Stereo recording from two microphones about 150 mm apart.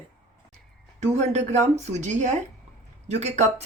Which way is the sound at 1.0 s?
50° right (ahead or behind).